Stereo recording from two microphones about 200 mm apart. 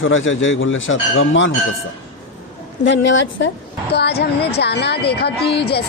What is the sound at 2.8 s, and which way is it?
Speech, 65° left (ahead or behind).